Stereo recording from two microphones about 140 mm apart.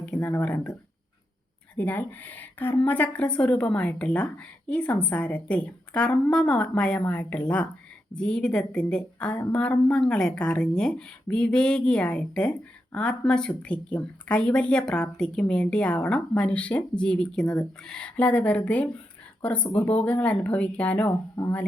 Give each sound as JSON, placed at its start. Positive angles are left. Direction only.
{"t": 0.0, "sound": "speech", "side_deg": 10}
{"t": 1.7, "sound": "speech", "side_deg": 10}
{"t": 21.4, "sound": "speech", "side_deg": 25}